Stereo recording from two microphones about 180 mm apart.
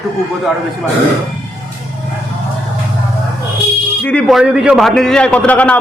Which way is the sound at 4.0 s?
5° left (ahead or behind).